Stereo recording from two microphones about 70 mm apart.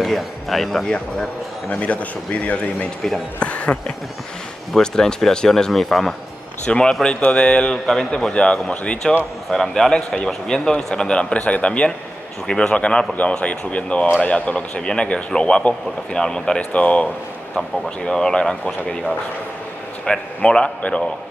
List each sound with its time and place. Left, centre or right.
0.0 s speech: centre
0.8 s speech: centre
4.7 s speech: centre
7.7 s speech: centre
8.3 s speech: centre
20.1 s speech: centre